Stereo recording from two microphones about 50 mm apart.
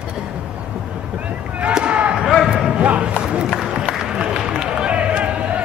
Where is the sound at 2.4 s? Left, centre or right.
Centre.